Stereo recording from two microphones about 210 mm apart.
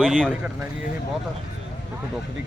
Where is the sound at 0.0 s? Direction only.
5° left (ahead or behind).